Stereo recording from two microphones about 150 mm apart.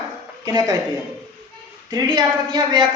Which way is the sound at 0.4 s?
25° right (ahead or behind).